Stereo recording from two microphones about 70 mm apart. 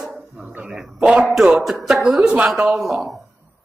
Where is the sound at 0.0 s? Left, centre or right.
Centre.